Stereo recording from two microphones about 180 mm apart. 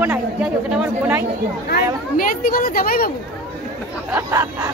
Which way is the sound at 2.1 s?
50° left (ahead or behind).